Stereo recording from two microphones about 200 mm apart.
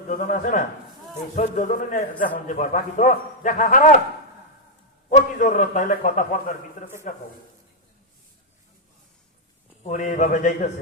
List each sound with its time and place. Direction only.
0.1 s a man's voice: 40° left (ahead or behind)
5.0 s a man's voice: 40° left (ahead or behind)
9.8 s a man's voice: 40° left (ahead or behind)